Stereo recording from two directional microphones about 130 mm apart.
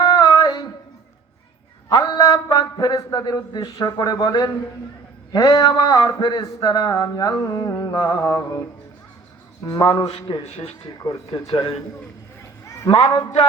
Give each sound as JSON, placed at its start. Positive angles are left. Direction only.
{"t": 0.0, "sound": "a sound", "side_deg": 30}
{"t": 1.9, "sound": "a man's voice", "side_deg": 30}
{"t": 9.6, "sound": "speech", "side_deg": 25}
{"t": 10.4, "sound": "speech", "side_deg": 55}
{"t": 11.0, "sound": "speech", "side_deg": 30}
{"t": 12.9, "sound": "speech", "side_deg": 30}